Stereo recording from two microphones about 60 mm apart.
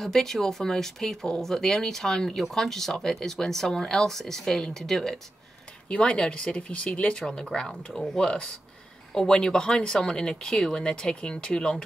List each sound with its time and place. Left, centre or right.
0.0 s speech: centre
5.9 s speech: centre